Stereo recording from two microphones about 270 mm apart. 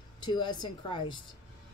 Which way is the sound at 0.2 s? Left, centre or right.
Centre.